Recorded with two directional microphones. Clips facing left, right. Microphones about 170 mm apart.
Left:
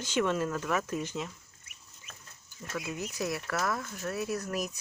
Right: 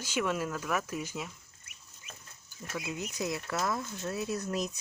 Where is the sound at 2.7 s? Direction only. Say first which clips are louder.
Left 1 dB; 15° right (ahead or behind).